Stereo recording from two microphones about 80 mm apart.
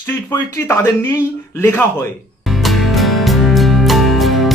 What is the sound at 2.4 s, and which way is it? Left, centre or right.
Music, centre.